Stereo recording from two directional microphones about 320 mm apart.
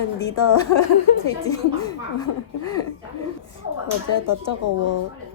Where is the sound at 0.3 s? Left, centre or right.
Left.